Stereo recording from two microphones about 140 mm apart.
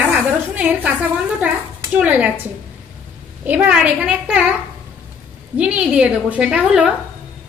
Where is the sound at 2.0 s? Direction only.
10° right (ahead or behind).